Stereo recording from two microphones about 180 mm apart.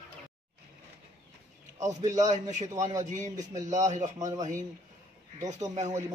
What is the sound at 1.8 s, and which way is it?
Speech, 40° right (ahead or behind).